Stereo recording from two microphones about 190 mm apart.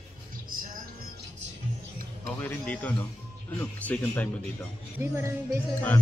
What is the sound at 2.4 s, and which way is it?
Speech, 10° left (ahead or behind).